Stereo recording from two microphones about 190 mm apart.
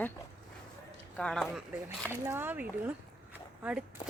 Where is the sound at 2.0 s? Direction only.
10° right (ahead or behind).